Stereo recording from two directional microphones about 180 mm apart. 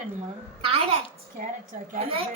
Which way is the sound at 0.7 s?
35° right (ahead or behind).